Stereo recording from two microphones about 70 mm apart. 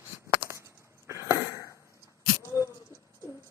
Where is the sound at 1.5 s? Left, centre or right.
Left.